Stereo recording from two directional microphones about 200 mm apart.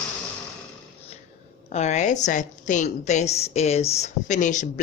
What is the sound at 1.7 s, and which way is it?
A woman's voice, 35° left (ahead or behind).